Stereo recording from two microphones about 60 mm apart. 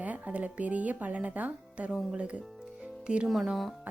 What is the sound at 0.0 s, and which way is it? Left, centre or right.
Speech, right.